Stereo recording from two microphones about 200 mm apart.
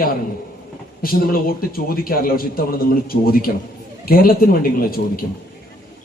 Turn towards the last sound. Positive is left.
turn(degrees=45)  # may be behind; listen again after turning